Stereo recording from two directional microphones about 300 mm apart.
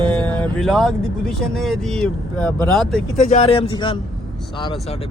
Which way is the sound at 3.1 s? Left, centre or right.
Left.